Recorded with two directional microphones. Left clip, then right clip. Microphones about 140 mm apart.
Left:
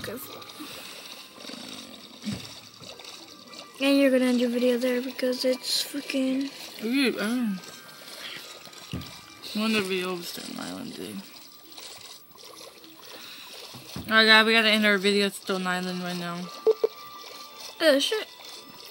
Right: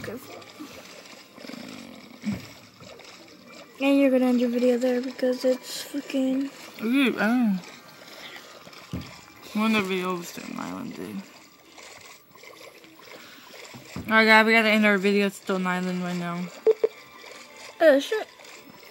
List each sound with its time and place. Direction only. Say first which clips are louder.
0.0 s speech: even; 5° left (ahead or behind)
1.6 s a sound: left 1 dB; 5° left (ahead or behind)
3.5 s speech: right 1 dB; 5° left (ahead or behind)
6.8 s speech: right 2 dB; 40° right (ahead or behind)
9.6 s speech: right 2 dB; 20° right (ahead or behind)
14.0 s speech: right 1 dB; 40° right (ahead or behind)
16.4 s a sound: right 2 dB; 5° right (ahead or behind)
17.7 s speech: right 3 dB; 10° left (ahead or behind)